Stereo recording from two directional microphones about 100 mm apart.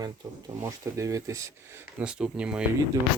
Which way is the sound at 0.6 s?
30° right (ahead or behind).